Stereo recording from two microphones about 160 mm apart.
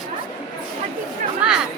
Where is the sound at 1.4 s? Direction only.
5° right (ahead or behind).